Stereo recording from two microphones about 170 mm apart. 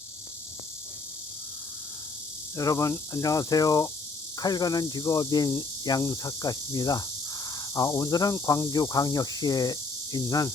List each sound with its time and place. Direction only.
2.6 s speech: 20° left (ahead or behind)